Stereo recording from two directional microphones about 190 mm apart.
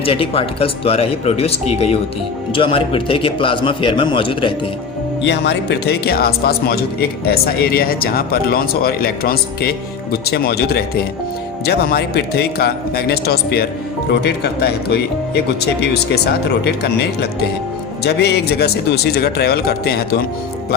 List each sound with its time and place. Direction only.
0.0 s a man's voice: 30° left (ahead or behind)
5.2 s a man's voice: 65° left (ahead or behind)